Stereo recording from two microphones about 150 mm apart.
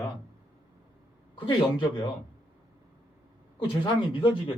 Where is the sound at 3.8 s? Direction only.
30° left (ahead or behind).